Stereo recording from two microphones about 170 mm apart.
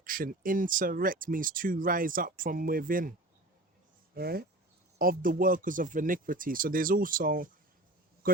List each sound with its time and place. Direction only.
0.0 s speech: 55° right (ahead or behind)